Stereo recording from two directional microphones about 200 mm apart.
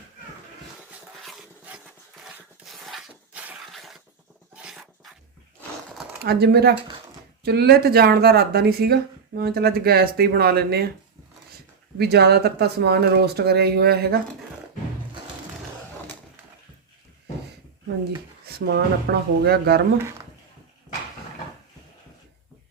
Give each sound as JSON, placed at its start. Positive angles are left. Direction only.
{"t": 1.2, "sound": "a sound", "side_deg": -5}
{"t": 4.5, "sound": "dog", "side_deg": -5}
{"t": 6.2, "sound": "speech", "side_deg": -55}
{"t": 11.9, "sound": "speech", "side_deg": -55}
{"t": 18.4, "sound": "speech", "side_deg": -55}